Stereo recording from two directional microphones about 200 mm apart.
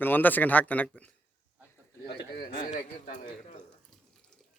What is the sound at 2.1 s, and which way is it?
A man's voice, 50° left (ahead or behind).